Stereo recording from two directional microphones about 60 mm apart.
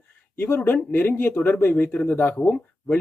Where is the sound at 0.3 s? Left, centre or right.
Left.